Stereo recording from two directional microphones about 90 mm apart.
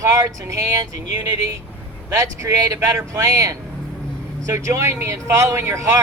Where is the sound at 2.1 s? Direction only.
35° right (ahead or behind).